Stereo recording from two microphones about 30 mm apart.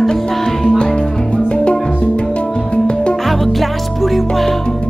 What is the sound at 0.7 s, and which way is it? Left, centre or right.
Music, left.